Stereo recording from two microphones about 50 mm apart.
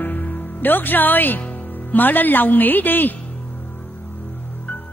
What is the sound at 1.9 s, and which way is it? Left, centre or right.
Speech, left.